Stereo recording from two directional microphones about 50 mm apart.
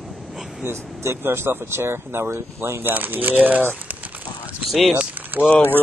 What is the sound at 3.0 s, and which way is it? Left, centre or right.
Speech, right.